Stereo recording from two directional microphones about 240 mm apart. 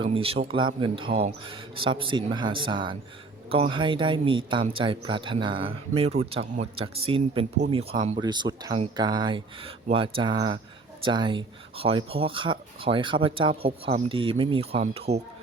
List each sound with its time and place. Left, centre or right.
0.0 s speech: right